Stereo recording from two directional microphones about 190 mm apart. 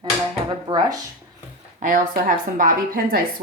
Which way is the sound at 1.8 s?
45° right (ahead or behind).